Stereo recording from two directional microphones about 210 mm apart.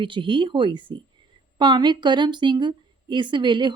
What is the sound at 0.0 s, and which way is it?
Speech, 25° right (ahead or behind).